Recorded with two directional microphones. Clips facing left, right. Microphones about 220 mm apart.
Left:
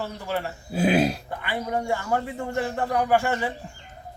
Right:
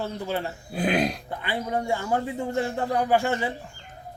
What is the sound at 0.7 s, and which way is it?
Speech, centre (ahead or behind).